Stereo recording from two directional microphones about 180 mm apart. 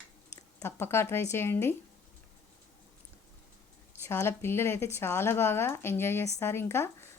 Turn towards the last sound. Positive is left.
turn(degrees=15)  # may be behind; listen again after turning